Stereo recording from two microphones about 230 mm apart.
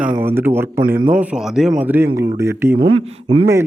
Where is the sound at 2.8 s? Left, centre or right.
Right.